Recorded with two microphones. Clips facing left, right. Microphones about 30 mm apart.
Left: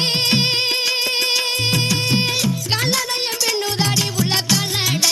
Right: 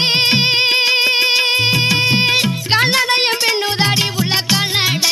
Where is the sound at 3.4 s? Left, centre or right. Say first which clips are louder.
Right 4 dB; right.